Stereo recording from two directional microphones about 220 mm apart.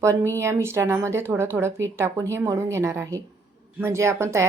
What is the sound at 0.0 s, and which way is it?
Speech, 15° right (ahead or behind).